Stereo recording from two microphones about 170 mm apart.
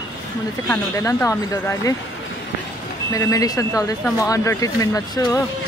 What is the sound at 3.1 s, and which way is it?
Speech, 20° left (ahead or behind).